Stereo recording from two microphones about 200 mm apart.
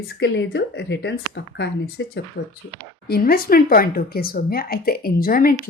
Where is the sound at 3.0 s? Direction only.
50° left (ahead or behind).